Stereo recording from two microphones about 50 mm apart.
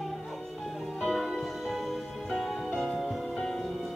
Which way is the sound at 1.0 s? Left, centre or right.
Centre.